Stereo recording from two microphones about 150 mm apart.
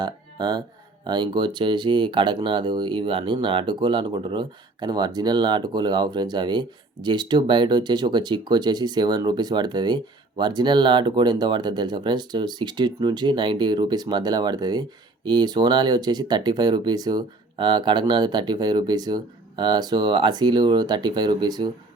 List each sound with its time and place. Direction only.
0.0 s speech: 30° right (ahead or behind)